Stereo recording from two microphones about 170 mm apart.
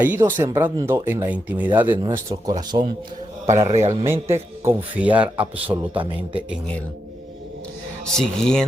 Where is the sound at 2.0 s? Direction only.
25° right (ahead or behind).